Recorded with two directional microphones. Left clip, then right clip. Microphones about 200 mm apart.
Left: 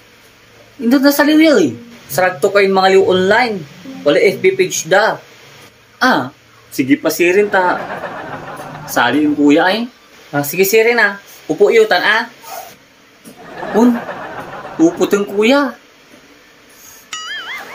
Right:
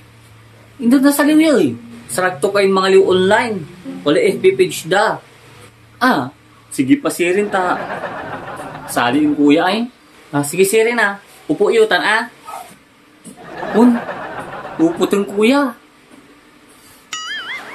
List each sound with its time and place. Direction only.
0.8 s speech: 10° right (ahead or behind)
13.6 s chuckle: centre (ahead or behind)
15.0 s speech: 10° right (ahead or behind)
17.1 s music: centre (ahead or behind)